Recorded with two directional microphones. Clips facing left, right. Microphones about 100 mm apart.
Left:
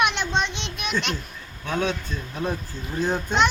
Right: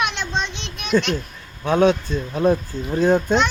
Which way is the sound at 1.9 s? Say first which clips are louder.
Right 9 dB; 60° right (ahead or behind).